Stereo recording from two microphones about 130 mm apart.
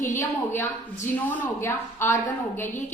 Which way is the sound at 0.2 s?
20° left (ahead or behind).